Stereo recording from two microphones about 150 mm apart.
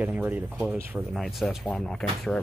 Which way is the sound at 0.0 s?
10° right (ahead or behind).